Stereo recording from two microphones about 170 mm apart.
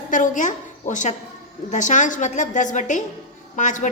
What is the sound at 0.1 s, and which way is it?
A woman's voice, 45° left (ahead or behind).